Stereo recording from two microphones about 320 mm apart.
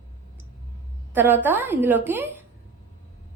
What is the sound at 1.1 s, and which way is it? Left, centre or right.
A woman's voice, centre.